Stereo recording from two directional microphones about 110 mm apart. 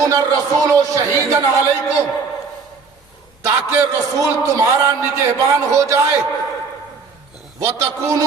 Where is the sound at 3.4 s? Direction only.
30° right (ahead or behind).